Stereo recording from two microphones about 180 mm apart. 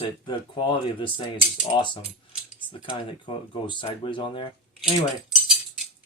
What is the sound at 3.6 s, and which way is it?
Speech, 25° left (ahead or behind).